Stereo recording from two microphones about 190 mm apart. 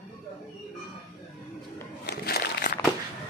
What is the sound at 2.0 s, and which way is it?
Crumpling, 60° left (ahead or behind).